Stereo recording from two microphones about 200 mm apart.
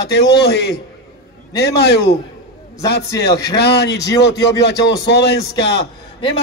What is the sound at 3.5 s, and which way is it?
Speech, 55° left (ahead or behind).